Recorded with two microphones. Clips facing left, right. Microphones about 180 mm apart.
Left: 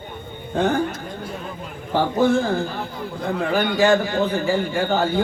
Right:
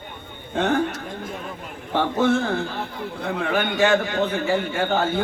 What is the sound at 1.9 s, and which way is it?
A man's voice, 40° left (ahead or behind).